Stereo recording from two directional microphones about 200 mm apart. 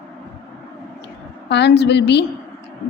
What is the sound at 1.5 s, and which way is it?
Speech, 60° left (ahead or behind).